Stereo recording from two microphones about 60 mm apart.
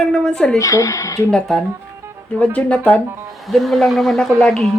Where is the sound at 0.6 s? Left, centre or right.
Left.